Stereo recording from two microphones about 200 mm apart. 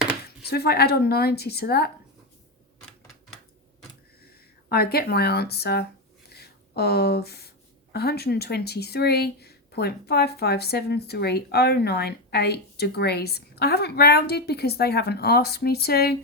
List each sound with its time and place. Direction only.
0.4 s speech: 55° left (ahead or behind)
4.7 s speech: 50° left (ahead or behind)
6.3 s a sound: 50° left (ahead or behind)
7.9 s speech: 55° left (ahead or behind)